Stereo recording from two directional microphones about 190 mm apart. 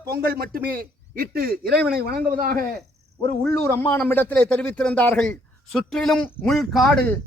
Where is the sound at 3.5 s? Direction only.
10° left (ahead or behind).